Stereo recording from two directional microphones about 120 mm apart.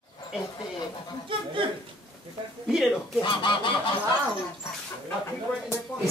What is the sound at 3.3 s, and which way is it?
Goose, 40° left (ahead or behind).